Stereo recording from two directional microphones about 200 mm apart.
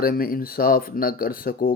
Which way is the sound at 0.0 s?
45° left (ahead or behind).